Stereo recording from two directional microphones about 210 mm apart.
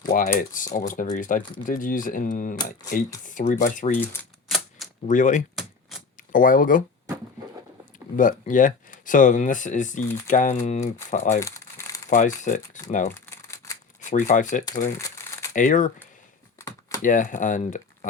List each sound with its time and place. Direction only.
0.1 s speech: 40° left (ahead or behind)
3.9 s typewriter: 10° left (ahead or behind)
5.0 s speech: 35° left (ahead or behind)
8.1 s speech: 40° left (ahead or behind)
13.1 s crumpling: 15° left (ahead or behind)
14.0 s speech: 35° left (ahead or behind)
14.9 s crumpling: 15° left (ahead or behind)
15.5 s speech: 40° left (ahead or behind)
16.6 s typing: 15° left (ahead or behind)
17.0 s speech: 40° left (ahead or behind)